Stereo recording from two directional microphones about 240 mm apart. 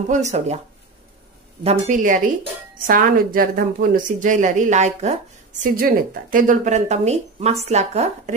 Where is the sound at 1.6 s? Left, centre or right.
Right.